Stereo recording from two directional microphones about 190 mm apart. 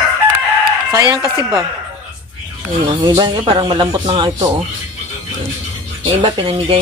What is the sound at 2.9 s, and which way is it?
Speech, 25° right (ahead or behind).